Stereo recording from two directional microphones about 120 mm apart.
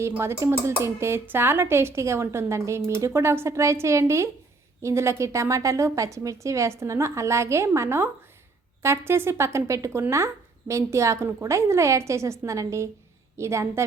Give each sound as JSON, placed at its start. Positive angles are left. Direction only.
{"t": 0.0, "sound": "speech", "side_deg": -20}